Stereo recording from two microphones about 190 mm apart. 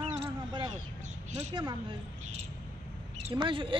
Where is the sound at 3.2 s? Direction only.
25° right (ahead or behind).